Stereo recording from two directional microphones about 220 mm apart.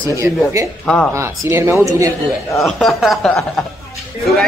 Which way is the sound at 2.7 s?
Centre (ahead or behind).